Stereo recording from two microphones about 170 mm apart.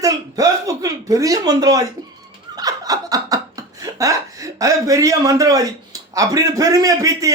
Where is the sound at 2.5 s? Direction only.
20° right (ahead or behind).